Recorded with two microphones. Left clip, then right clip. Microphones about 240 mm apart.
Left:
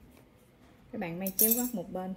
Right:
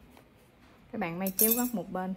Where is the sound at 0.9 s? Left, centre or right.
Right.